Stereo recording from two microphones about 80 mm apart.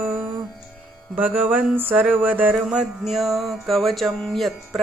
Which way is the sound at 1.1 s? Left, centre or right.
Right.